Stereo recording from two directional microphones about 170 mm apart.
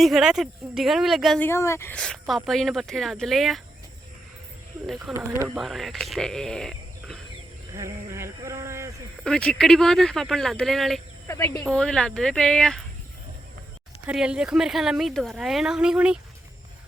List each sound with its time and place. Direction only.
0.0 s a woman's voice: centre (ahead or behind)
1.4 s speech: 15° left (ahead or behind)
2.0 s a woman's voice: centre (ahead or behind)
4.9 s a woman's voice: centre (ahead or behind)
7.7 s a sound: 15° right (ahead or behind)
9.2 s a woman's voice: 5° left (ahead or behind)
11.3 s speech: 15° left (ahead or behind)
11.6 s a woman's voice: 5° left (ahead or behind)
14.1 s a woman's voice: 5° right (ahead or behind)